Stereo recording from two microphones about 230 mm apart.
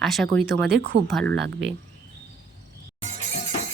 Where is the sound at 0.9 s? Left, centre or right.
Right.